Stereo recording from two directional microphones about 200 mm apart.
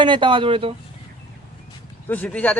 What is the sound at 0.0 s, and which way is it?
Speech, 25° right (ahead or behind).